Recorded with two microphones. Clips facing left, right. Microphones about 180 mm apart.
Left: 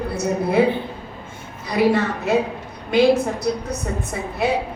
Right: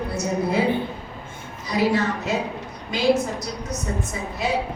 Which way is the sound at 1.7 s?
60° left (ahead or behind).